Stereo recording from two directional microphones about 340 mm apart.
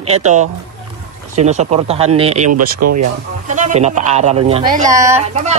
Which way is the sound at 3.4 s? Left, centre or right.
Right.